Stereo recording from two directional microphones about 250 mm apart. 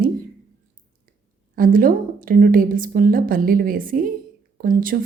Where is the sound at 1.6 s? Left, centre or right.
Right.